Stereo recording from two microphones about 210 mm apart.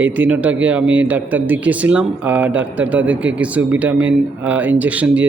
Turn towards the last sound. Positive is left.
turn(degrees=-5)  # may be behind; listen again after turning